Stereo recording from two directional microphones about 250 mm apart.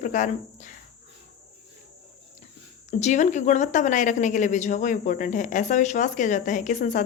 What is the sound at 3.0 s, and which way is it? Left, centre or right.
Speech, left.